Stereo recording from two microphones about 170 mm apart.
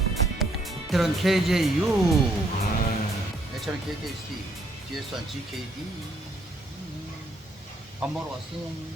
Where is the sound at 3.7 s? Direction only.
5° right (ahead or behind).